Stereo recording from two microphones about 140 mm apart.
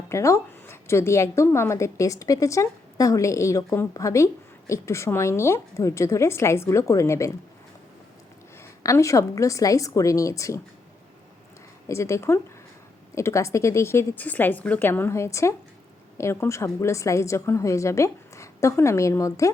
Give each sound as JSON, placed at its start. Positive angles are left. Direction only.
{"t": 0.1, "sound": "a woman's voice", "side_deg": 20}
{"t": 8.6, "sound": "a woman's voice", "side_deg": 20}
{"t": 11.9, "sound": "a woman's voice", "side_deg": 20}